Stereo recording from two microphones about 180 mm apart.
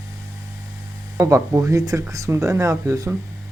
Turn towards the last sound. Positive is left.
turn(degrees=-15)  # may be behind; listen again after turning